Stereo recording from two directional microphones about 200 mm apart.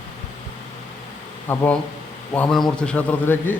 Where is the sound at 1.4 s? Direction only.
10° left (ahead or behind).